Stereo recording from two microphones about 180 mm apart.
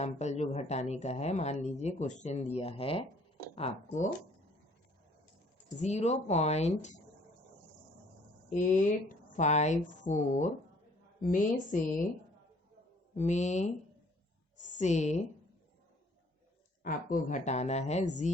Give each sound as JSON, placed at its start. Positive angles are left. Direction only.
{"t": 0.0, "sound": "speech", "side_deg": 40}
{"t": 5.8, "sound": "speech", "side_deg": 40}
{"t": 9.3, "sound": "a woman's voice", "side_deg": 40}
{"t": 13.1, "sound": "a woman's voice", "side_deg": 40}
{"t": 16.8, "sound": "speech", "side_deg": 45}